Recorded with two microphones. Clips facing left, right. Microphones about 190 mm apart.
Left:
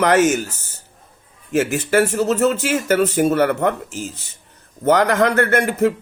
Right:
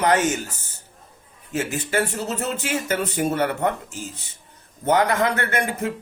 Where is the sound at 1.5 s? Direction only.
85° left.